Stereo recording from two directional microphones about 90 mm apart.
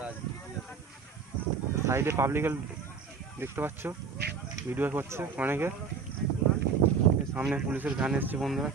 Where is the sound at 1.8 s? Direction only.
30° right (ahead or behind).